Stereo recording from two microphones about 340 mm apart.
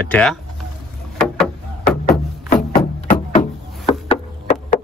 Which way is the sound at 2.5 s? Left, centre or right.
Left.